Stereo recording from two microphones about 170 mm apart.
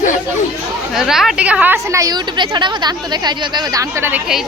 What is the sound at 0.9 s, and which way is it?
A woman's voice, 5° right (ahead or behind).